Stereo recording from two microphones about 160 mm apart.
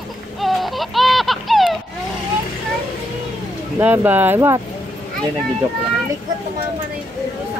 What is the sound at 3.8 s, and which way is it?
Speech, 10° right (ahead or behind).